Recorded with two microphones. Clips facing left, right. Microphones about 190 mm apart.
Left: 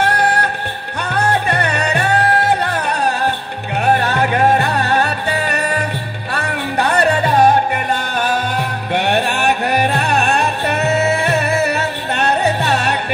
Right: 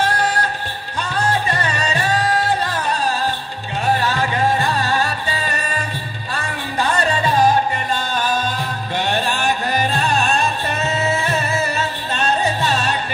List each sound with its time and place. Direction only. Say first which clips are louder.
0.0 s music: left 3 dB; 65° left (ahead or behind)